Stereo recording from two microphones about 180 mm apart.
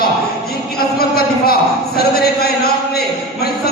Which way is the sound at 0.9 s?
60° left (ahead or behind).